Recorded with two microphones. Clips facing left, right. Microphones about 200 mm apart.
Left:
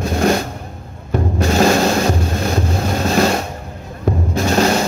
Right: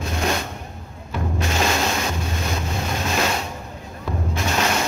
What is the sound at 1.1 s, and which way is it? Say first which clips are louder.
Music: left 8 dB; 40° left (ahead or behind).